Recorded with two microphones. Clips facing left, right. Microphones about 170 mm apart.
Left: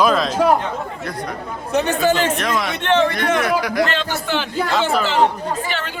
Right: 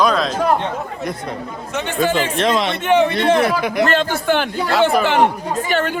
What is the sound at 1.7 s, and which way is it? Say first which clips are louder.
Speech: left 2 dB; 40° left (ahead or behind).